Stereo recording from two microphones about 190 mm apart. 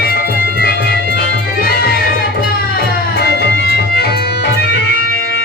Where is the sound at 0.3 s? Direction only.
50° right (ahead or behind).